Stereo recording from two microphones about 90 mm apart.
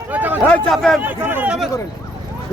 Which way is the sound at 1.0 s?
20° right (ahead or behind).